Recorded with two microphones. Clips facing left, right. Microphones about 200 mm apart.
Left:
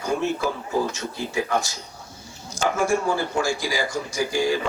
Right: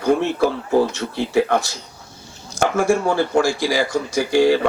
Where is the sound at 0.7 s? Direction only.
60° right (ahead or behind).